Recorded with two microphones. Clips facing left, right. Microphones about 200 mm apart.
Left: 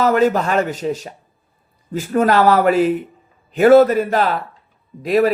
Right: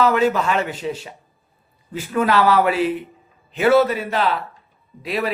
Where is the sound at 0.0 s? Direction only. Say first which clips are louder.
Left 2 dB; 45° left (ahead or behind).